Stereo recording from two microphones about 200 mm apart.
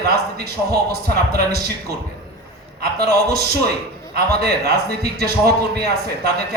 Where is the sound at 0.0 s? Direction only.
50° right (ahead or behind).